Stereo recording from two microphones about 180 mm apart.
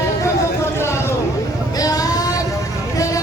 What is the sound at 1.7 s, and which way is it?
Music, 20° left (ahead or behind).